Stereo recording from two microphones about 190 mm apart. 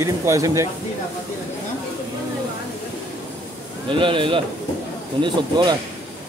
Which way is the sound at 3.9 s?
25° right (ahead or behind).